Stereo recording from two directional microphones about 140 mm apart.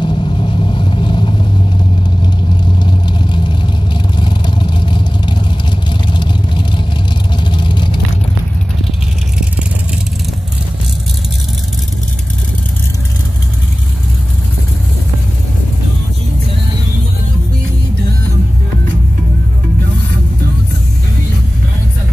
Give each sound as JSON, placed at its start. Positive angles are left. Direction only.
{"t": 0.0, "sound": "vehicle", "side_deg": 35}
{"t": 2.8, "sound": "vehicle", "side_deg": 35}